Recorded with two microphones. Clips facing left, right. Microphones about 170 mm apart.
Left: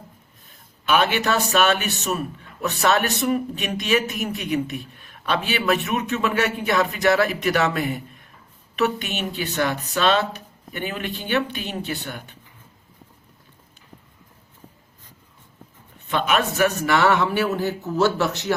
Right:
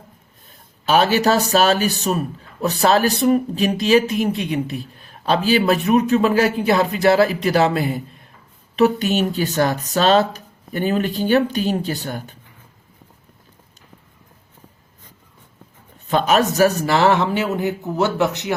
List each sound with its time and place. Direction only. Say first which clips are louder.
0.9 s a man's voice: right 5 dB; 35° right (ahead or behind)
16.0 s speech: right 5 dB; 40° right (ahead or behind); by 18.5 s 20° right (ahead or behind)